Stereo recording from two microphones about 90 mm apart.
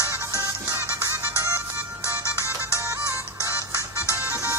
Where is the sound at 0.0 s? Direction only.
25° right (ahead or behind).